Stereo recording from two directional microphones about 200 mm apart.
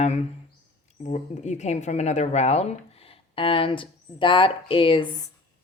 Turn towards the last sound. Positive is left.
turn(degrees=20)  # may be behind; listen again after turning